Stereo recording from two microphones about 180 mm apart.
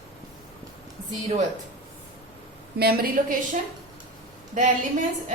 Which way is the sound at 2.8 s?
60° right (ahead or behind).